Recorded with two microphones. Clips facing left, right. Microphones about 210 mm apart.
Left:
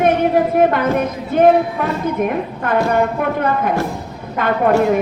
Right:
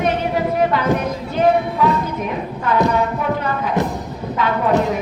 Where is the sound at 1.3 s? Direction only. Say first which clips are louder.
Left 4 dB; 50° left (ahead or behind).